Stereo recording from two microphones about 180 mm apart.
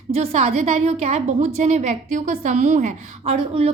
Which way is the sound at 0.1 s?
35° right (ahead or behind).